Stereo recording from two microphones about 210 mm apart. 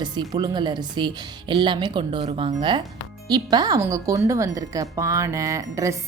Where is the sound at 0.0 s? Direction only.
20° right (ahead or behind).